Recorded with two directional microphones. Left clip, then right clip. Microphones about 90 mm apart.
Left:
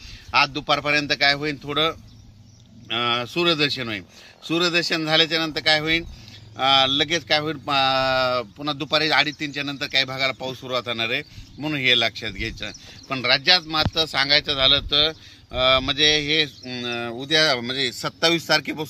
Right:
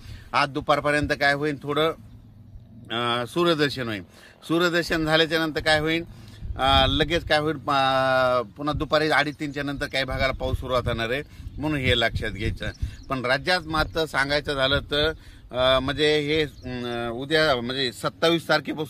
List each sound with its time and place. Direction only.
0.3 s speech: 50° right (ahead or behind); by 16.5 s 35° right (ahead or behind)
16.9 s speech: centre (ahead or behind)